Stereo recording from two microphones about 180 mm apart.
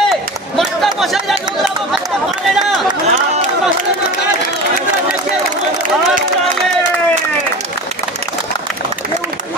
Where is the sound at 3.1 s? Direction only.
40° right (ahead or behind).